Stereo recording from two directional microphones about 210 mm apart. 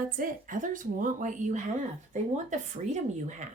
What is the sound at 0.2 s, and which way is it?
Speech, 40° right (ahead or behind).